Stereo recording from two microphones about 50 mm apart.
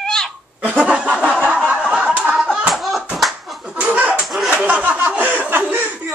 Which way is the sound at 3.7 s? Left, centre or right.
Right.